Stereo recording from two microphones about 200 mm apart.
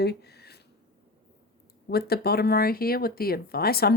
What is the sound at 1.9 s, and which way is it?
Speech, 50° left (ahead or behind).